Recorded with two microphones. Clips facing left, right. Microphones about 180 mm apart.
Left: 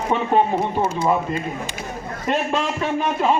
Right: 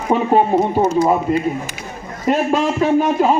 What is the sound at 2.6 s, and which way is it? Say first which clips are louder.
Speech: right 7 dB; 40° right (ahead or behind).